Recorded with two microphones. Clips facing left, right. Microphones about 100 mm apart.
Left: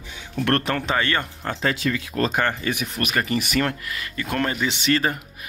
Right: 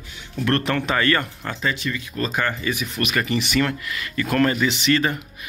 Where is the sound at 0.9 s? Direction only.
25° left (ahead or behind).